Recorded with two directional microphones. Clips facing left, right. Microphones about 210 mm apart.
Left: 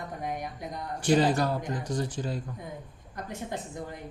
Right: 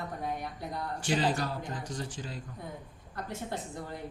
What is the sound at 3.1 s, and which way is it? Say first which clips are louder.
Speech: left 1 dB; 15° left (ahead or behind).